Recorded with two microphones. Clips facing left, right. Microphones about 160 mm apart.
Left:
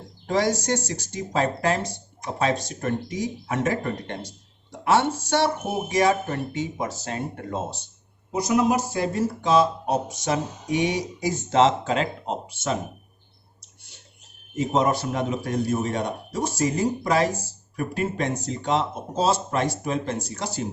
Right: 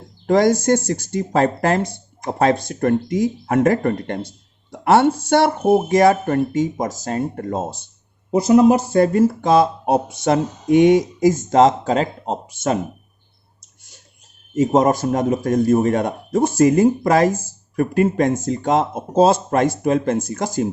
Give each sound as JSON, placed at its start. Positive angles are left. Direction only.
{"t": 0.3, "sound": "a man's voice", "side_deg": -50}
{"t": 8.3, "sound": "a man's voice", "side_deg": -55}
{"t": 13.6, "sound": "whispering", "side_deg": -45}
{"t": 14.5, "sound": "a man's voice", "side_deg": -45}